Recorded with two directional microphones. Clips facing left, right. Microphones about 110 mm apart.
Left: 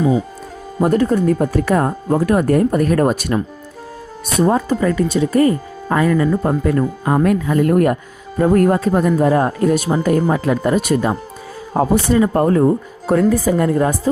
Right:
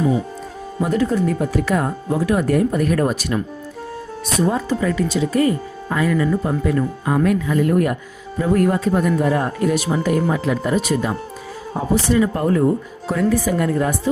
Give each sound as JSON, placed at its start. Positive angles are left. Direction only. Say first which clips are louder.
{"t": 0.8, "sound": "speech", "louder": "left 4 dB", "side_deg": 50}